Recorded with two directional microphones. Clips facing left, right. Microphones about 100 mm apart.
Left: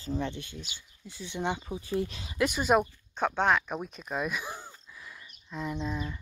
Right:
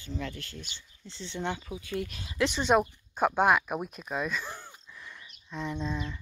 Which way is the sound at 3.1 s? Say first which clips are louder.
Right 2 dB; 10° right (ahead or behind).